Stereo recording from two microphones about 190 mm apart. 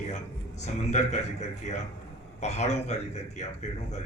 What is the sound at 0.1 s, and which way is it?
A man's voice, 35° left (ahead or behind).